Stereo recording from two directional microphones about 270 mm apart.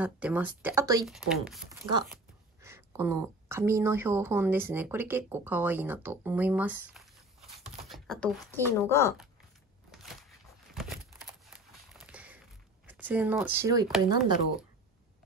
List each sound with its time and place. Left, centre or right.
0.0 s speech: centre
1.7 s speech: centre
10.7 s a sound: centre
12.8 s speech: centre
14.0 s speech: left